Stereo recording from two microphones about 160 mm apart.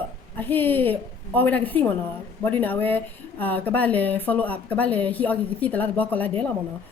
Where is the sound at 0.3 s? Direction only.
10° left (ahead or behind).